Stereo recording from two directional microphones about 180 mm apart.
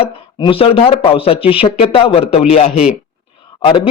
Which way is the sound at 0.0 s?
30° left (ahead or behind).